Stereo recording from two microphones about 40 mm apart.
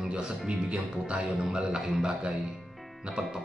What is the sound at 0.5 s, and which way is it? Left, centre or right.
Speech, right.